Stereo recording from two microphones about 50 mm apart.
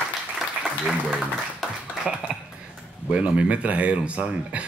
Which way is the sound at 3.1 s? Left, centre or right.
Right.